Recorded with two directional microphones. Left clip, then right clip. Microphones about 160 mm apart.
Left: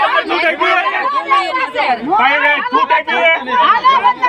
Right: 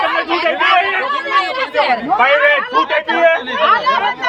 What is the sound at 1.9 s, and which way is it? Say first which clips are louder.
Speech: left 1 dB; 30° right (ahead or behind).